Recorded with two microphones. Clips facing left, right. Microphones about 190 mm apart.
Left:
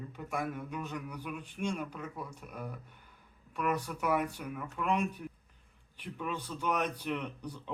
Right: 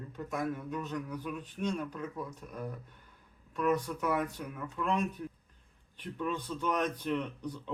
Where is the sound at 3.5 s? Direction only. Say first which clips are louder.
Right 3 dB; 10° left (ahead or behind).